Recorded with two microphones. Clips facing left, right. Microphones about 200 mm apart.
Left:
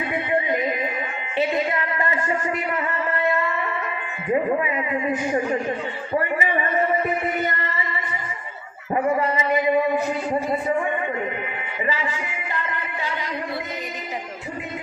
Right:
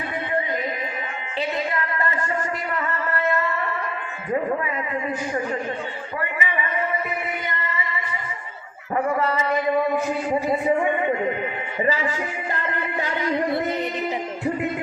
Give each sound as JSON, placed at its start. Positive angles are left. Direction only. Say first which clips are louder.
{"t": 1.4, "sound": "music", "louder": "left 3 dB", "side_deg": 20}
{"t": 6.4, "sound": "a sound", "louder": "left 4 dB", "side_deg": 40}
{"t": 9.2, "sound": "music", "louder": "left 1 dB", "side_deg": 15}